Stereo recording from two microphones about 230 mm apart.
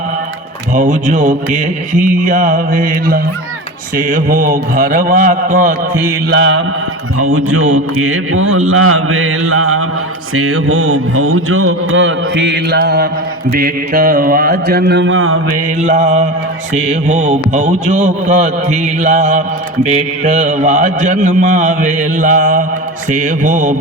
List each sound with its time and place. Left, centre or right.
0.7 s speech: right
6.3 s mantra: right
7.2 s speech: right
15.5 s a man's voice: right